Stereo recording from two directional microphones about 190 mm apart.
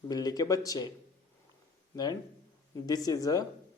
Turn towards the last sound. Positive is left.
turn(degrees=20)  # may be behind; listen again after turning